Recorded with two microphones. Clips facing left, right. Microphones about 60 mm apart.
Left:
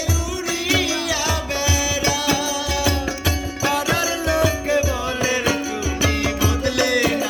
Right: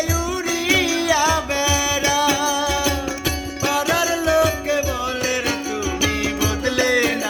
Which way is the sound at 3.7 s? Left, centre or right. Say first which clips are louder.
Right 2 dB; centre.